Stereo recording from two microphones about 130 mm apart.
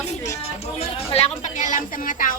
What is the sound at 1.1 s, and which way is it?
A woman's voice, 55° left (ahead or behind).